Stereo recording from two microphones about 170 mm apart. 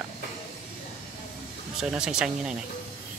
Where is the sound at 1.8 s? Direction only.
5° right (ahead or behind).